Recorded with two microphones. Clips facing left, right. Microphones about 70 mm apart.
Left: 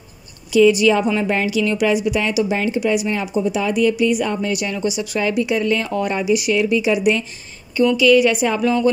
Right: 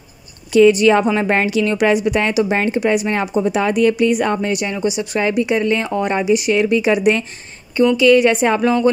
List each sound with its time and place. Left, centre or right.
0.5 s speech: right
4.5 s speech: right